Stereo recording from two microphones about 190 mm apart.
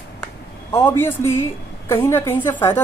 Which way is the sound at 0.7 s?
15° left (ahead or behind).